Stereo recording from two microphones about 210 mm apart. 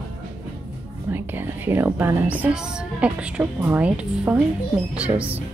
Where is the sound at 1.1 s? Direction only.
10° right (ahead or behind).